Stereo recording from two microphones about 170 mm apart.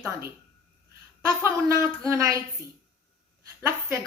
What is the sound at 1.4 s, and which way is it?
Speech, 15° right (ahead or behind).